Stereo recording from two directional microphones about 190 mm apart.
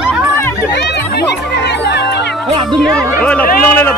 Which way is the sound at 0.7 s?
65° left (ahead or behind).